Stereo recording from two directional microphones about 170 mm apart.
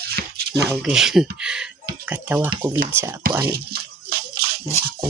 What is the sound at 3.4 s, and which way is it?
Music, 65° right (ahead or behind).